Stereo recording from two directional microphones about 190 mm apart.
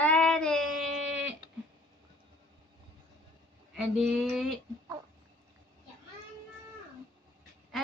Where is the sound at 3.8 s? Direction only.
Centre (ahead or behind).